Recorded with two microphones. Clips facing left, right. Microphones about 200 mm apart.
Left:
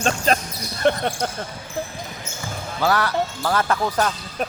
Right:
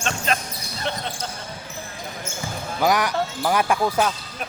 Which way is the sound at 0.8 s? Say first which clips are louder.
Left 9 dB; 55° left (ahead or behind).